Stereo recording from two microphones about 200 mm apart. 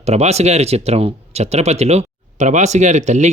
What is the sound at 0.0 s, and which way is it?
Speech, 30° right (ahead or behind).